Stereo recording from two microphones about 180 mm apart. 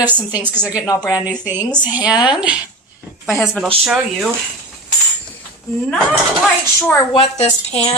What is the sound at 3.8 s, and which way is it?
Speech, 5° right (ahead or behind).